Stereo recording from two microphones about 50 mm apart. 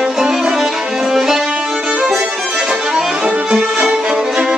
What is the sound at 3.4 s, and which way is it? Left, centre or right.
Violin, centre.